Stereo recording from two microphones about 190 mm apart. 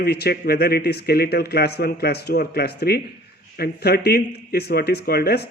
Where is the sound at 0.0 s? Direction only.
55° left (ahead or behind).